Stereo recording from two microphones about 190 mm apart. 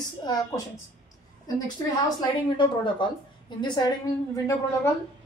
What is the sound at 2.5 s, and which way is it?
A woman's voice, 25° left (ahead or behind).